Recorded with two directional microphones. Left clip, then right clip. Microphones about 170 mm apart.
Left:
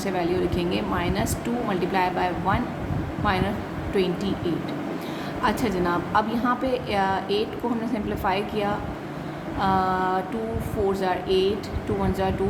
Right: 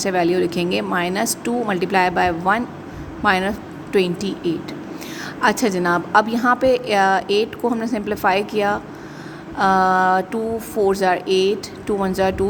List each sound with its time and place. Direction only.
0.0 s speech: 50° right (ahead or behind)
5.4 s speech: 50° right (ahead or behind)